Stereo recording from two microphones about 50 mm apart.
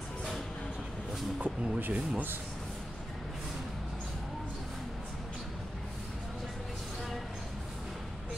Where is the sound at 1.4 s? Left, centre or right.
Right.